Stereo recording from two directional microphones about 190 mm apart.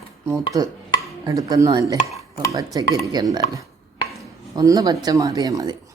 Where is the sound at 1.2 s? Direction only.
20° right (ahead or behind).